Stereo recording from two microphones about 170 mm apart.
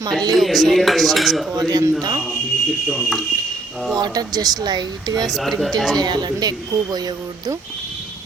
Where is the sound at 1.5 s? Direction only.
25° right (ahead or behind).